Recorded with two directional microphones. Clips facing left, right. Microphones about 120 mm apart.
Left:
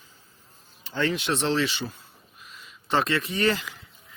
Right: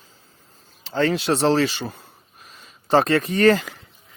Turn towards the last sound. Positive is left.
turn(degrees=-45)  # may be behind; listen again after turning